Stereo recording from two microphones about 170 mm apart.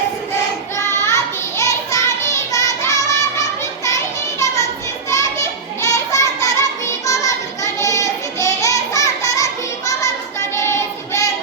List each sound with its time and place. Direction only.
0.8 s child singing: 15° left (ahead or behind)
3.8 s music: 20° left (ahead or behind)
5.1 s children playing: 15° left (ahead or behind)
10.5 s child singing: 15° left (ahead or behind)